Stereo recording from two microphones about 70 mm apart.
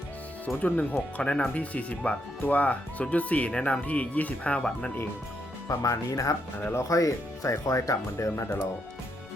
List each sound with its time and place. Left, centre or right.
0.4 s speech: left
5.6 s speech: left